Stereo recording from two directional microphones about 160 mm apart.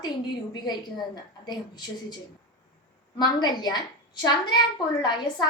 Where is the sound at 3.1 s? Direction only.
25° left (ahead or behind).